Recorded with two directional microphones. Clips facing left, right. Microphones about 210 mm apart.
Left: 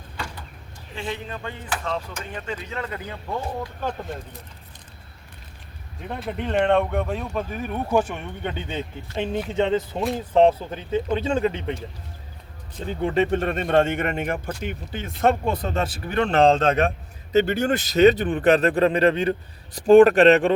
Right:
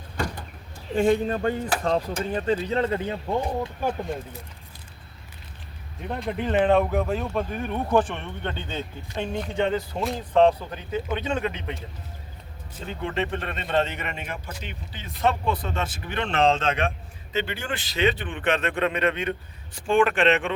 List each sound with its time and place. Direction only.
0.9 s speech: 45° right (ahead or behind); by 3.9 s 15° right (ahead or behind)
4.0 s speech: centre (ahead or behind)
6.0 s speech: centre (ahead or behind)
9.1 s speech: 25° left (ahead or behind)
12.9 s a man's voice: 40° left (ahead or behind)